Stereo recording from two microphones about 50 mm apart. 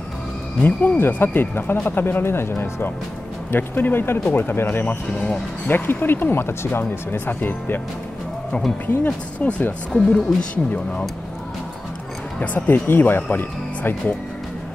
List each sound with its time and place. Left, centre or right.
0.6 s speech: left
3.5 s speech: left
8.8 s speech: left
9.9 s speech: centre
10.5 s speech: left
12.4 s speech: left